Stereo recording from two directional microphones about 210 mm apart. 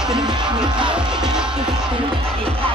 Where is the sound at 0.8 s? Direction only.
5° right (ahead or behind).